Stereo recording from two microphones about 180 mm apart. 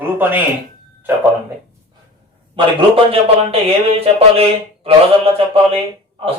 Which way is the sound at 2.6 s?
30° right (ahead or behind).